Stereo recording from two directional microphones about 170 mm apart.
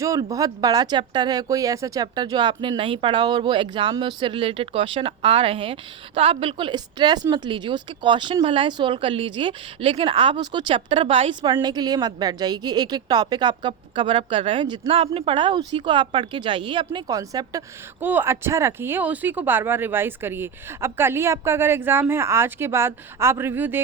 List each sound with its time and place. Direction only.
0.0 s speech: 20° right (ahead or behind)